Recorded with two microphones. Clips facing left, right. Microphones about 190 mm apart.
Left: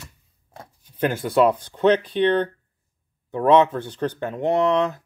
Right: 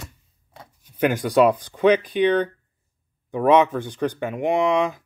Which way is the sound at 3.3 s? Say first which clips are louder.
Even; 10° right (ahead or behind).